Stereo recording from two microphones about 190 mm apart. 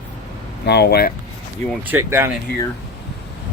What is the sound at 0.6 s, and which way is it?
Speech, 60° left (ahead or behind).